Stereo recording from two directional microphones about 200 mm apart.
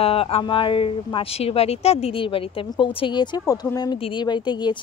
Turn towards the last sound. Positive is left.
turn(degrees=20)  # may be behind; listen again after turning